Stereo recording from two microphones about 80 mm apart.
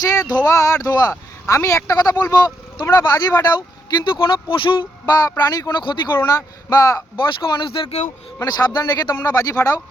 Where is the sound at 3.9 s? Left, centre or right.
Left.